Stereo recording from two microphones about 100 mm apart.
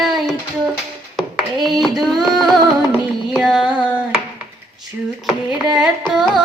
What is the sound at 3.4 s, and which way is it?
Music, 5° right (ahead or behind).